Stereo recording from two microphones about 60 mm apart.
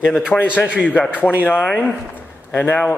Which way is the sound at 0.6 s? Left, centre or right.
Left.